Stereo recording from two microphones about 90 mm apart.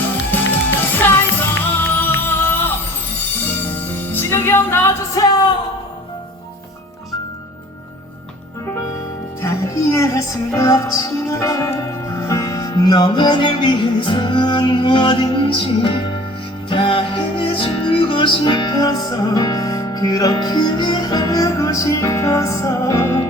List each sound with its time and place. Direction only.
0.9 s music: 25° left (ahead or behind)
4.1 s music: 25° left (ahead or behind)
5.1 s music: 50° left (ahead or behind)
9.4 s music: 35° left (ahead or behind)